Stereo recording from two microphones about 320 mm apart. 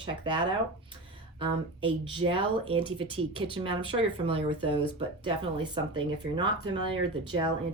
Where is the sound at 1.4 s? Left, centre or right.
Centre.